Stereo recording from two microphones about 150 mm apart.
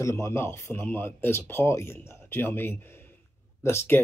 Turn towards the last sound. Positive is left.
turn(degrees=15)  # may be behind; listen again after turning